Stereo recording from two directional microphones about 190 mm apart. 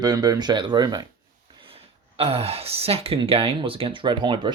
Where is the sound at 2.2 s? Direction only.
30° right (ahead or behind).